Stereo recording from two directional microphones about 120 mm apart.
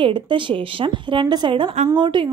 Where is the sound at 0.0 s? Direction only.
45° right (ahead or behind).